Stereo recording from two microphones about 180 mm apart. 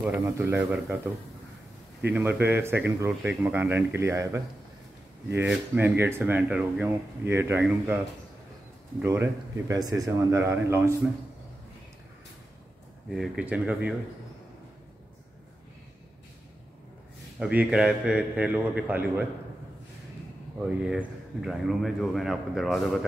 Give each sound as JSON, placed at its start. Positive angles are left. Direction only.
{"t": 0.0, "sound": "speech", "side_deg": -10}
{"t": 5.5, "sound": "speech", "side_deg": -10}
{"t": 9.0, "sound": "speech", "side_deg": -15}
{"t": 13.1, "sound": "speech", "side_deg": -5}
{"t": 17.4, "sound": "speech", "side_deg": -5}
{"t": 20.5, "sound": "speech", "side_deg": -5}